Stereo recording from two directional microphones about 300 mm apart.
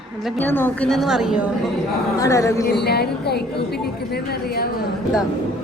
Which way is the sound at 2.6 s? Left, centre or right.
Left.